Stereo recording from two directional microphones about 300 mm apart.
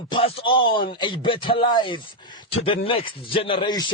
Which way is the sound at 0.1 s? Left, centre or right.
Centre.